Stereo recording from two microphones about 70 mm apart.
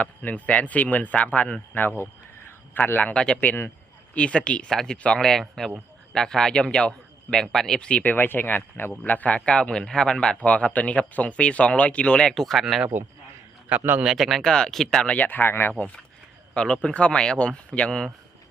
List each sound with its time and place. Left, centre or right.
0.0 s speech: left
3.1 s speech: centre
8.1 s speech: left
12.3 s speech: centre
13.7 s a man's voice: right
14.0 s speech: centre
15.0 s speech: left
16.6 s speech: centre